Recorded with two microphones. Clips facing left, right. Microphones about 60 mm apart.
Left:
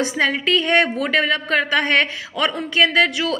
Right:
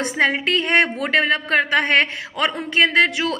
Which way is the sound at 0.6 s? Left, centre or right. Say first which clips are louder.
Left 1 dB; centre.